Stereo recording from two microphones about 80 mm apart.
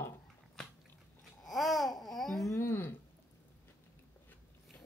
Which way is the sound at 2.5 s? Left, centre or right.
Left.